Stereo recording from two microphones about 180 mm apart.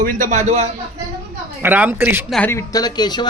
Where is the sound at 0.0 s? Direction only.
45° right (ahead or behind).